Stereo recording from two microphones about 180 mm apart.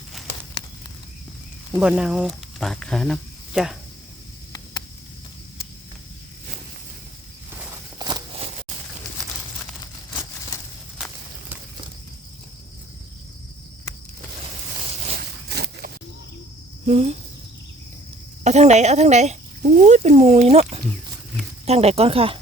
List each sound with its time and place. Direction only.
1.8 s speech: 5° right (ahead or behind)
7.9 s walk: 25° right (ahead or behind)
15.2 s a sound: 60° right (ahead or behind)
16.8 s cricket: 35° right (ahead or behind)
18.4 s speech: 40° right (ahead or behind)